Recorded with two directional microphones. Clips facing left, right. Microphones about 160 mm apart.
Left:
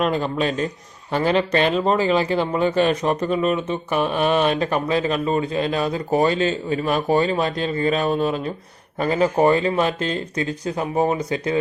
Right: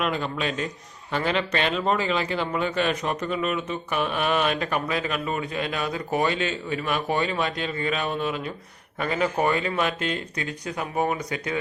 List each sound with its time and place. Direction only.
0.0 s speech: 35° left (ahead or behind)